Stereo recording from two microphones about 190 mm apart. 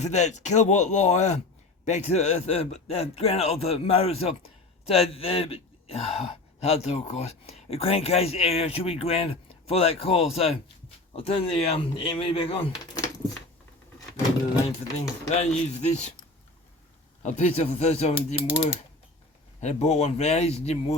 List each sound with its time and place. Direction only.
0.0 s speech: 35° left (ahead or behind)
15.3 s speech: 35° left (ahead or behind)
17.2 s speech: 35° left (ahead or behind)